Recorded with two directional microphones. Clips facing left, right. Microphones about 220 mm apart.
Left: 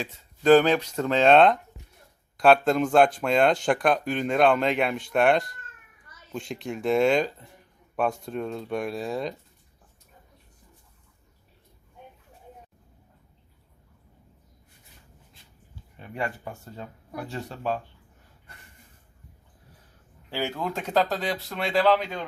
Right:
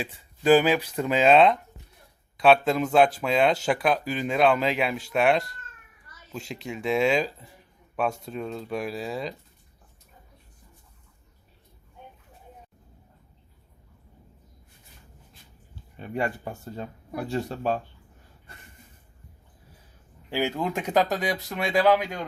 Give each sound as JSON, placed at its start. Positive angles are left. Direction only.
{"t": 0.0, "sound": "speech", "side_deg": -10}
{"t": 16.0, "sound": "speech", "side_deg": -30}
{"t": 20.3, "sound": "speech", "side_deg": -15}